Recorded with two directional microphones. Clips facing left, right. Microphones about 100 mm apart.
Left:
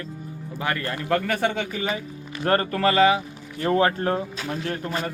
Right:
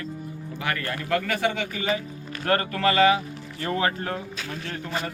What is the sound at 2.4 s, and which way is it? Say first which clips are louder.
Speech: left 2 dB; 30° left (ahead or behind).